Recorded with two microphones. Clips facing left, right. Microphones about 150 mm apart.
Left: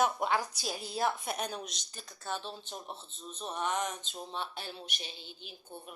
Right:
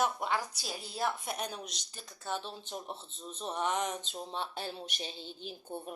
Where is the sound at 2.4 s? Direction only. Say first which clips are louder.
Right 1 dB; 15° right (ahead or behind); by 5.1 s 30° right (ahead or behind).